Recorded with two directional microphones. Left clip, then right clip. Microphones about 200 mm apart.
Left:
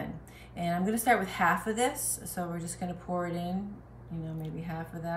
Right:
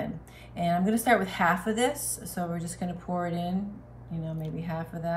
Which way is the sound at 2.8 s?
5° left (ahead or behind).